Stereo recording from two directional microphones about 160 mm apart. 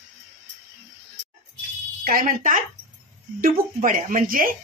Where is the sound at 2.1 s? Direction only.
60° right (ahead or behind).